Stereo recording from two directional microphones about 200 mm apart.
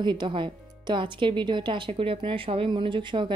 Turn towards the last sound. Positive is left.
turn(degrees=-25)  # may be behind; listen again after turning